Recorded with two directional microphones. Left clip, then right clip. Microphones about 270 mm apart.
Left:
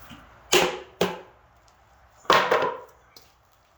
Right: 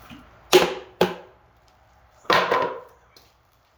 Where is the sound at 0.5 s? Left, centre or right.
Centre.